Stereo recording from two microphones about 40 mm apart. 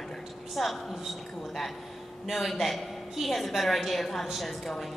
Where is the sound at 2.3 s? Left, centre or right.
Centre.